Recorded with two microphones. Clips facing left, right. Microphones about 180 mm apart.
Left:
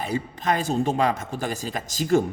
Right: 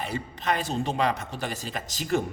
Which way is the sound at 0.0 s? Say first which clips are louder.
Left 4 dB; 45° left (ahead or behind).